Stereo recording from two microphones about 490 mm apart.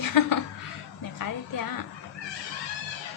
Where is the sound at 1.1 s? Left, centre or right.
Left.